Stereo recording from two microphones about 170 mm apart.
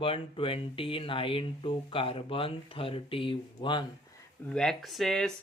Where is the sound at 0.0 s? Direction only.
30° left (ahead or behind).